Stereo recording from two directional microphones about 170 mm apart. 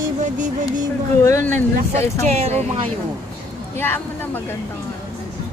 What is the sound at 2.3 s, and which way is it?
Speech, 40° right (ahead or behind).